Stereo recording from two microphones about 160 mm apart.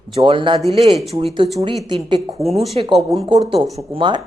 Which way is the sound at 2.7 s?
35° right (ahead or behind).